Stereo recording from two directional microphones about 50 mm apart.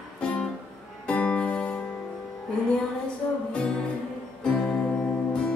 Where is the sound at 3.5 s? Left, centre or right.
Centre.